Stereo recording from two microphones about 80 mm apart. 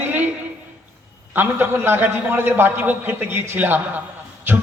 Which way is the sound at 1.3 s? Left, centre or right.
Right.